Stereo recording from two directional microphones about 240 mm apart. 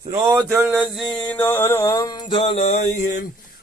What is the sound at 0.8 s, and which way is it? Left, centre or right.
Music, centre.